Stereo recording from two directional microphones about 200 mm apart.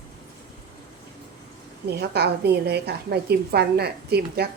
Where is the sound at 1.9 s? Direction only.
55° right (ahead or behind).